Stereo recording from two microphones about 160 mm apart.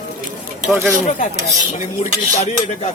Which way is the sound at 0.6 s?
10° right (ahead or behind).